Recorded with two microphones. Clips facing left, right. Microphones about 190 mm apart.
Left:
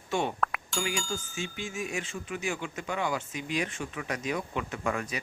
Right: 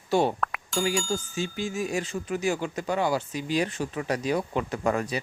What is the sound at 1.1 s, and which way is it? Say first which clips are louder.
Speech: right 6 dB; 35° right (ahead or behind).